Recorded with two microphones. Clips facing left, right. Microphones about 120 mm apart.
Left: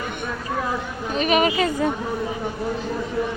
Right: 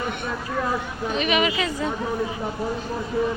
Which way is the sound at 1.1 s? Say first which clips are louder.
Left 3 dB; 40° left (ahead or behind).